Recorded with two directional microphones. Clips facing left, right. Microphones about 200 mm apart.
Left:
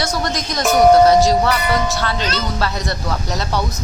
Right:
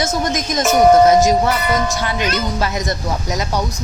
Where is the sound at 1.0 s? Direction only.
20° right (ahead or behind).